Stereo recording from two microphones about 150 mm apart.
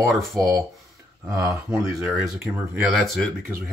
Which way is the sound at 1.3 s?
20° right (ahead or behind).